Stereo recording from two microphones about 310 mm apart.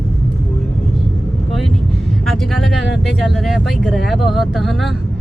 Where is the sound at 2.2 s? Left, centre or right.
Centre.